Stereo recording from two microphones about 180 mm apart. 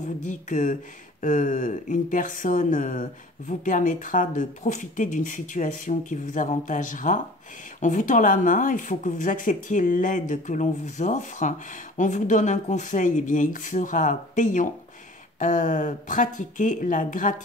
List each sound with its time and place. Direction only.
0.2 s speech: 45° left (ahead or behind)